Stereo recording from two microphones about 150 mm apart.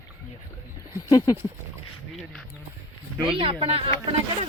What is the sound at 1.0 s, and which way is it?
Speech, 25° left (ahead or behind).